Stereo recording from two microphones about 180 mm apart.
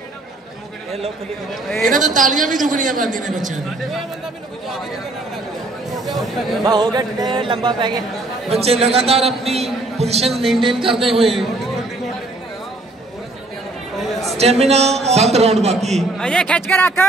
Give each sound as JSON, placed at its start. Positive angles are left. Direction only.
{"t": 1.5, "sound": "speech", "side_deg": 0}
{"t": 2.1, "sound": "a woman's voice", "side_deg": -45}
{"t": 6.0, "sound": "speech", "side_deg": 0}
{"t": 6.6, "sound": "a man's voice", "side_deg": -20}
{"t": 10.3, "sound": "speech", "side_deg": 0}
{"t": 10.8, "sound": "speech", "side_deg": -30}
{"t": 11.1, "sound": "speech", "side_deg": 0}
{"t": 14.3, "sound": "a man's voice", "side_deg": -35}
{"t": 16.0, "sound": "speech", "side_deg": 5}